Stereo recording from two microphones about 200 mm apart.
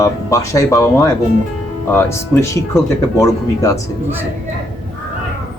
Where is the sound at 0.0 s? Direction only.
15° left (ahead or behind).